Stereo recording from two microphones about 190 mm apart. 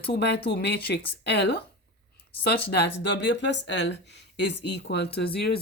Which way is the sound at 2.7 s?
65° left (ahead or behind).